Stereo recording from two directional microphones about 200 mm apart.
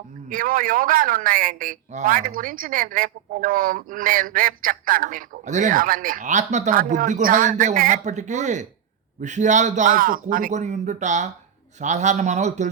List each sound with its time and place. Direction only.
0.3 s a man's voice: 45° right (ahead or behind)